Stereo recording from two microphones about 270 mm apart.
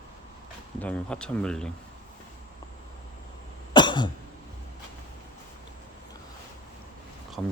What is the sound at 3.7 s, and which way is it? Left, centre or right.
Cough, centre.